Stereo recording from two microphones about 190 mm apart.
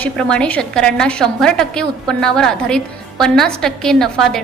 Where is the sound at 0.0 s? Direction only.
5° left (ahead or behind).